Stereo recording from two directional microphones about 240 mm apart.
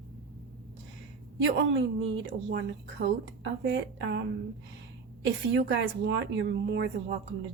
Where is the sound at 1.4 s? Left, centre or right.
Right.